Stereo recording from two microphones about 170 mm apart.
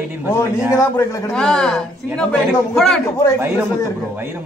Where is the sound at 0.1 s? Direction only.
10° right (ahead or behind).